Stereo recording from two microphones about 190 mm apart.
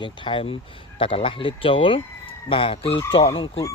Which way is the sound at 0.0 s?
25° left (ahead or behind).